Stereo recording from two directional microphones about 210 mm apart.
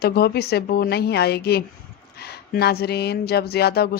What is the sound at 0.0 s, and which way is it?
Speech, 50° left (ahead or behind).